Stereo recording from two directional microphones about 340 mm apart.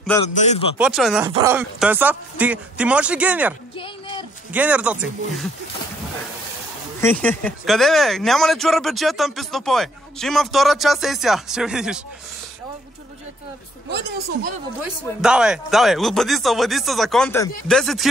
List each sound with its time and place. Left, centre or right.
0.3 s speech: centre
0.7 s speech: centre
3.7 s a sound: centre
4.5 s speech: centre
7.0 s speech: centre
13.8 s speech: right
15.2 s speech: centre